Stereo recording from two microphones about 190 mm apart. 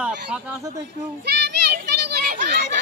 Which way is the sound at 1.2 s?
60° right (ahead or behind).